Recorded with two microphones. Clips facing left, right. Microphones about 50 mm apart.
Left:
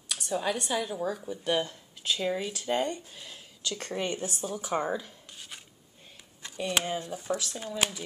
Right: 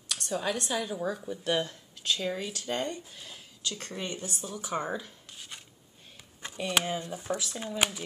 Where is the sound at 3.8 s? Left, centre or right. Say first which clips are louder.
Left 8 dB; left.